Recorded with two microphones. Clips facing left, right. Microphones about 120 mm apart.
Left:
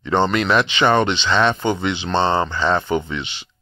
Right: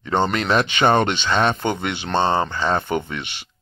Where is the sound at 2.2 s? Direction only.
40° right (ahead or behind).